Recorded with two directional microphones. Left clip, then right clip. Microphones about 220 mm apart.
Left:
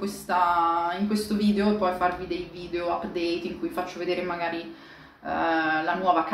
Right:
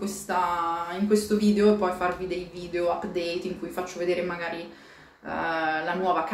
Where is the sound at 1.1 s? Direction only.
10° right (ahead or behind).